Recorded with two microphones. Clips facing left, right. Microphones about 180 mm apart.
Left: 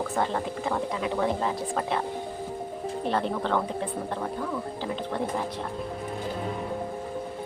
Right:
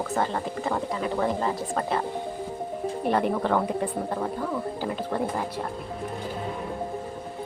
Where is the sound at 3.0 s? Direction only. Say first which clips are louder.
Right 3 dB; 10° right (ahead or behind).